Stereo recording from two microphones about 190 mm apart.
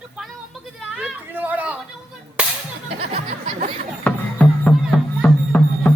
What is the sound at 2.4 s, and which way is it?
Whip, 5° right (ahead or behind).